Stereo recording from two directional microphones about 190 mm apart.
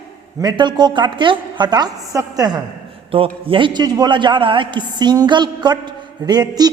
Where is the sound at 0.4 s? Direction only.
25° right (ahead or behind).